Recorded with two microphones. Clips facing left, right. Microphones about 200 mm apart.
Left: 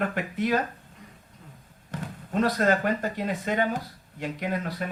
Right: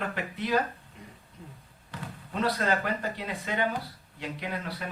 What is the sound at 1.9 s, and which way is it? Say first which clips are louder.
Speech: left 7 dB; 45° left (ahead or behind).